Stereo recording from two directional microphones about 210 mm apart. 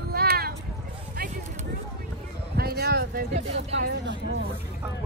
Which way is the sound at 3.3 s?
30° right (ahead or behind).